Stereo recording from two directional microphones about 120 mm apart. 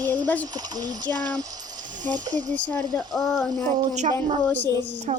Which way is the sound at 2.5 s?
15° left (ahead or behind).